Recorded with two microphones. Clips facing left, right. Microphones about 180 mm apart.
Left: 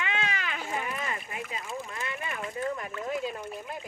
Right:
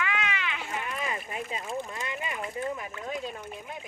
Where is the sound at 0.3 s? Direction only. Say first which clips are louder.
Even; 40° left (ahead or behind).